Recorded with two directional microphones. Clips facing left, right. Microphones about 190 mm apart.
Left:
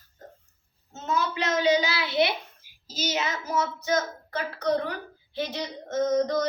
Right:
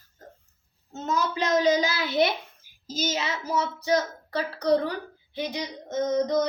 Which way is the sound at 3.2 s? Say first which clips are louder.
Left 3 dB; 30° right (ahead or behind).